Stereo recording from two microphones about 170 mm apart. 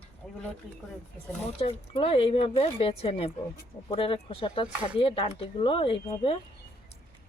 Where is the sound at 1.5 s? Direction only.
35° left (ahead or behind).